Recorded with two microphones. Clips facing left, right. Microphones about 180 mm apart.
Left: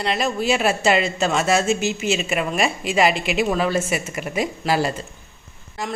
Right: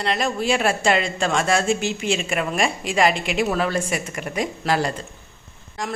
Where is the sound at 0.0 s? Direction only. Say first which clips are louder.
Left 1 dB; centre (ahead or behind).